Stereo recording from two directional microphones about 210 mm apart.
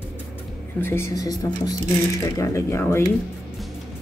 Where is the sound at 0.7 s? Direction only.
10° left (ahead or behind).